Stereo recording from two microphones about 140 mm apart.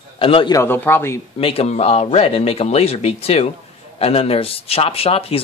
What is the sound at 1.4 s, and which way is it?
Speech, 45° left (ahead or behind).